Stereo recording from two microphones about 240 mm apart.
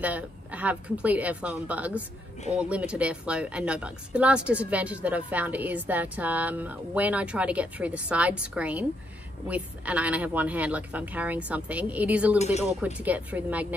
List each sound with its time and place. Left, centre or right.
0.0 s speech: centre
12.4 s speech: left
12.8 s speech: centre